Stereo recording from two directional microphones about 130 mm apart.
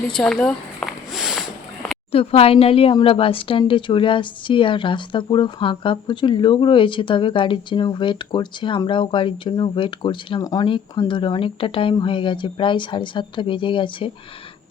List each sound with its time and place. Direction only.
0.1 s a sound: 5° left (ahead or behind)
2.1 s a woman's voice: 50° left (ahead or behind)
10.4 s speech: 25° left (ahead or behind)
11.1 s speech: 40° left (ahead or behind)